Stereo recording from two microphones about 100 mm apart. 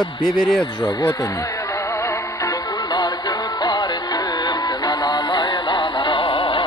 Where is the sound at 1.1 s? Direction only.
30° left (ahead or behind).